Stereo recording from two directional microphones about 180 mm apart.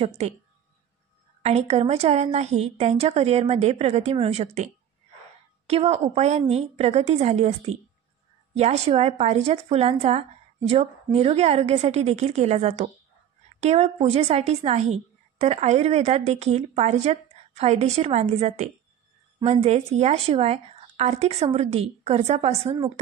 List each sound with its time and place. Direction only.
0.2 s a woman's voice: 35° right (ahead or behind)
1.4 s a woman's voice: 35° right (ahead or behind)
5.7 s a woman's voice: 35° right (ahead or behind)